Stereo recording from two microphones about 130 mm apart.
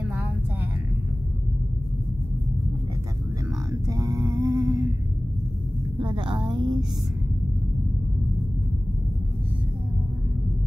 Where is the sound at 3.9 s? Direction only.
25° right (ahead or behind).